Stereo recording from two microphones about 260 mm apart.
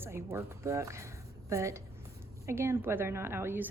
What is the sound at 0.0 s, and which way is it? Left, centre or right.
A woman's voice, centre.